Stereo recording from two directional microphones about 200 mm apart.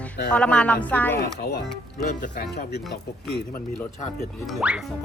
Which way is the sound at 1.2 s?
55° left (ahead or behind).